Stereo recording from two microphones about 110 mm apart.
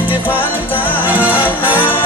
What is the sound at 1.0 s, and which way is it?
Music, 15° right (ahead or behind).